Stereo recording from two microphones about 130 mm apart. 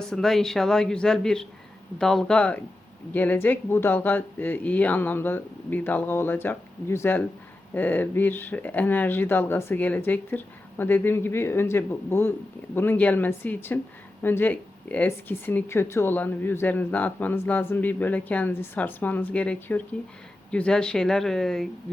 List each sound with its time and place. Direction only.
0.0 s speech: 5° left (ahead or behind)